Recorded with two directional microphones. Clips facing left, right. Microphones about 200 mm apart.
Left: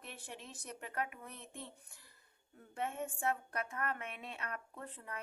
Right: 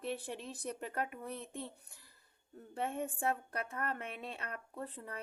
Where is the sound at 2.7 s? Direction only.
35° right (ahead or behind).